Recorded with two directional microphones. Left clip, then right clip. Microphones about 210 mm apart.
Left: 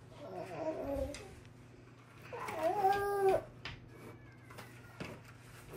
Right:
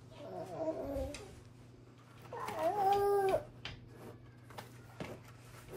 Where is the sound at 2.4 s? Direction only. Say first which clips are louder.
Even; centre (ahead or behind).